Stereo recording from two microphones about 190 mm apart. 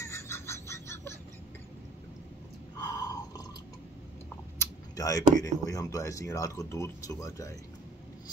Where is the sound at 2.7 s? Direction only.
20° left (ahead or behind).